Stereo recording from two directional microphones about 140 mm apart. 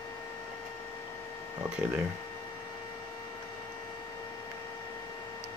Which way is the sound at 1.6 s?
5° right (ahead or behind).